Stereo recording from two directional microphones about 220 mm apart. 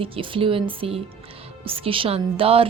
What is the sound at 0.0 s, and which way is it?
A woman's voice, 25° right (ahead or behind).